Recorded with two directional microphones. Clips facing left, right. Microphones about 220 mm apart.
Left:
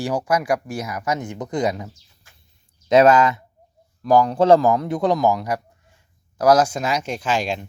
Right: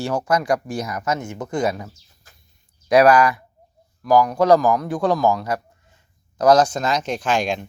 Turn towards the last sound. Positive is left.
turn(degrees=5)  # may be behind; listen again after turning